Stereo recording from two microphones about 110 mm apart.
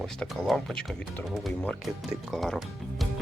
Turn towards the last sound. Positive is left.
turn(degrees=0)  # may be behind; listen again after turning